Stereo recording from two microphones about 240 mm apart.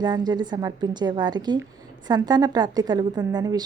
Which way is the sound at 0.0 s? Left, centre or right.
Centre.